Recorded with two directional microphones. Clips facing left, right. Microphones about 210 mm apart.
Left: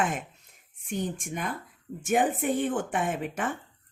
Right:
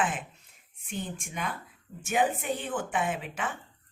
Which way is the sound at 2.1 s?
45° left (ahead or behind).